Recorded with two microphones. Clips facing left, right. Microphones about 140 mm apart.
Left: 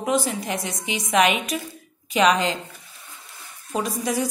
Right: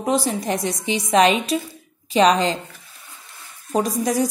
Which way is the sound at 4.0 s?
40° right (ahead or behind).